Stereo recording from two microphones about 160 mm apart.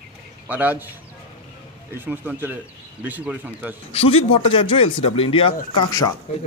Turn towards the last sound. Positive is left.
turn(degrees=20)  # may be behind; listen again after turning